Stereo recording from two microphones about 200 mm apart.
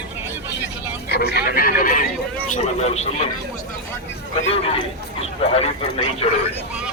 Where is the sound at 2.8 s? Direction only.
30° left (ahead or behind).